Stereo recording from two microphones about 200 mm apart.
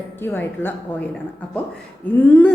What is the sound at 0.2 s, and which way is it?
Speech, 10° left (ahead or behind).